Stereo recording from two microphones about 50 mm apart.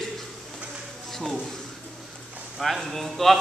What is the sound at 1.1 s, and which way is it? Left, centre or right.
Speech, centre.